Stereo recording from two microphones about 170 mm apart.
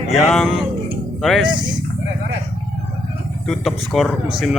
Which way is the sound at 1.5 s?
25° right (ahead or behind).